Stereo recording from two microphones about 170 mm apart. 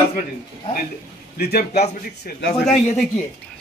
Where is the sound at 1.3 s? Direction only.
70° left (ahead or behind).